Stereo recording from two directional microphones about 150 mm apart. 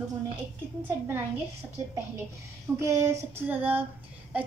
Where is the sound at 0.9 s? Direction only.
15° right (ahead or behind).